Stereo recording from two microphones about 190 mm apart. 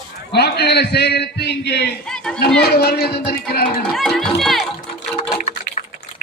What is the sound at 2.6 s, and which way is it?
Speech, 55° left (ahead or behind).